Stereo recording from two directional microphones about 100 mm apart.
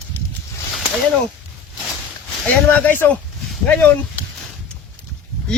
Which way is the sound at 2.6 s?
15° left (ahead or behind).